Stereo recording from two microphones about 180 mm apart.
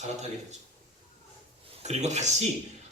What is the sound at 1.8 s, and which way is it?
Speech, 40° right (ahead or behind).